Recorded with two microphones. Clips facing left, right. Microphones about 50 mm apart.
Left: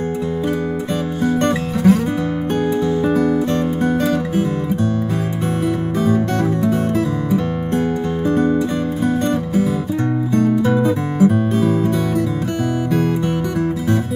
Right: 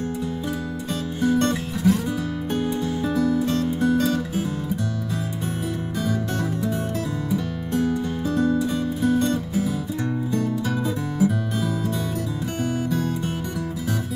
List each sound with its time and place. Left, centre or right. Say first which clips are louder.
1.2 s music: left 3 dB; left
3.1 s music: left 2 dB; left
5.9 s music: left 8 dB; left
8.3 s music: left 5 dB; left